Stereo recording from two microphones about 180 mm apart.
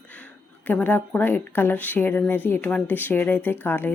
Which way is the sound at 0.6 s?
10° left (ahead or behind).